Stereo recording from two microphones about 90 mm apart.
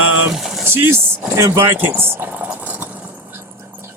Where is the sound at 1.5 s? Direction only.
25° right (ahead or behind).